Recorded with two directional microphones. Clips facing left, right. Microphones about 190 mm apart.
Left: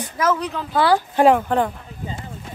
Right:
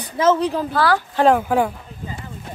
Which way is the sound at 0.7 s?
25° left (ahead or behind).